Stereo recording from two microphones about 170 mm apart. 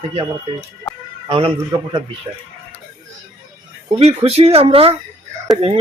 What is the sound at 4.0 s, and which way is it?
Speech, 35° right (ahead or behind).